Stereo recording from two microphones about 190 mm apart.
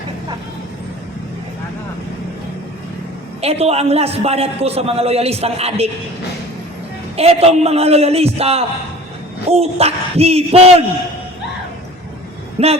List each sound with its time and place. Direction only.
3.4 s a man's voice: 30° right (ahead or behind)
7.2 s a man's voice: 30° right (ahead or behind)
12.6 s a man's voice: 30° right (ahead or behind)